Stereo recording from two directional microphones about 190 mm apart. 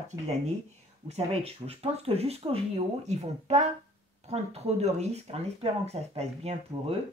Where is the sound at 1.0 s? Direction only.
30° right (ahead or behind).